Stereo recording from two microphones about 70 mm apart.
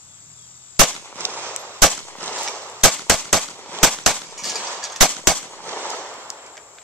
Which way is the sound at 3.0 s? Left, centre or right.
Centre.